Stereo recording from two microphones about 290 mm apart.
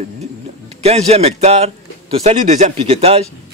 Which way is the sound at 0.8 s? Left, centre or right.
Right.